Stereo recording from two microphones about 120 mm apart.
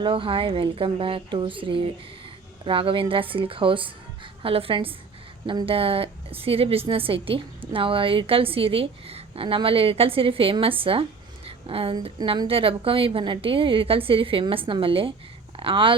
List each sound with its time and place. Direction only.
0.0 s a woman's voice: 45° right (ahead or behind)
11.4 s a sound: 50° right (ahead or behind)
12.0 s a woman's voice: 45° right (ahead or behind)